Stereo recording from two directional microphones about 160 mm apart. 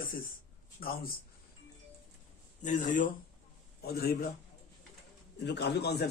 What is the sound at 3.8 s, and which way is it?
Speech, 75° left (ahead or behind).